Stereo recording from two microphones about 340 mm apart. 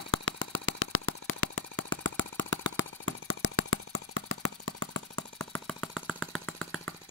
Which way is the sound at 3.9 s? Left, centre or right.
Left.